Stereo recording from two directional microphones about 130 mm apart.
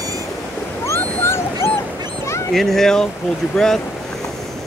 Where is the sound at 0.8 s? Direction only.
20° left (ahead or behind).